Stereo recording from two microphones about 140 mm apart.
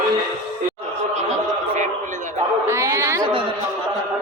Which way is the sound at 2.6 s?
20° right (ahead or behind).